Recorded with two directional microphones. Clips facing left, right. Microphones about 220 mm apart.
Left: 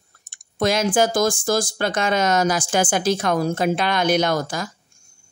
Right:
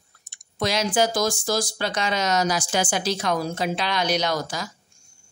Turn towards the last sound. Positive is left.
turn(degrees=50)  # may be behind; listen again after turning